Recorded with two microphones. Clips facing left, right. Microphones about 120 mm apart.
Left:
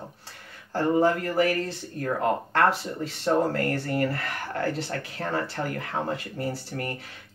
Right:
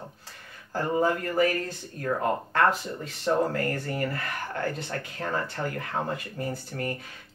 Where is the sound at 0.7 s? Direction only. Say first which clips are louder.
Left 3 dB; 30° left (ahead or behind).